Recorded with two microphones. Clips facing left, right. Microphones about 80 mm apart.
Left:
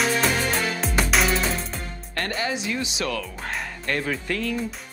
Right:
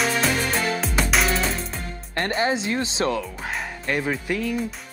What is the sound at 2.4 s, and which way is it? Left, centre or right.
Speech, right.